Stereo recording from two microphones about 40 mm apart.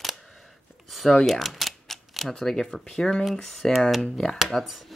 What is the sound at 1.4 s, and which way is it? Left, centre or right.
Typewriter, centre.